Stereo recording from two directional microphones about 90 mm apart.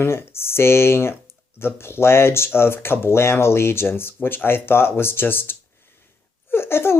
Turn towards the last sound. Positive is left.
turn(degrees=25)  # may be behind; listen again after turning